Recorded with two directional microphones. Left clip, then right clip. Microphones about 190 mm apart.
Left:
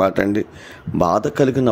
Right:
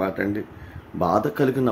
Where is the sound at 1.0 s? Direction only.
45° left (ahead or behind).